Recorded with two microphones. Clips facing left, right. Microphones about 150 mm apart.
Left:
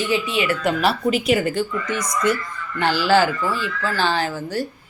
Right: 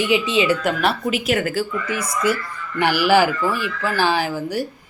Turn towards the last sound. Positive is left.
turn(degrees=-10)  # may be behind; listen again after turning